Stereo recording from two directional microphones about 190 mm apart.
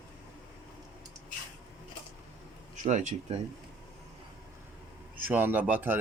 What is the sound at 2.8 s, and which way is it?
Speech, 40° right (ahead or behind).